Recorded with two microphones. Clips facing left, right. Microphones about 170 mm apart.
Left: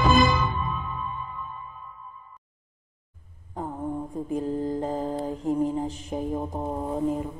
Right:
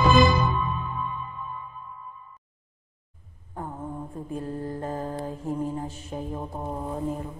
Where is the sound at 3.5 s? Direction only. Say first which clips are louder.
Left 4 dB; 15° left (ahead or behind).